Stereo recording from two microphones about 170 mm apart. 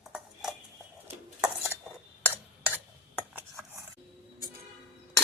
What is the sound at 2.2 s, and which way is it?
Cutlery, 10° left (ahead or behind).